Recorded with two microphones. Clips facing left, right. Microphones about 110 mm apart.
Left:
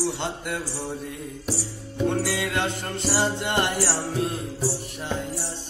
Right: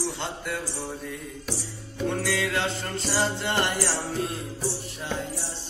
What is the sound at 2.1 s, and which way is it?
Speech, 15° left (ahead or behind).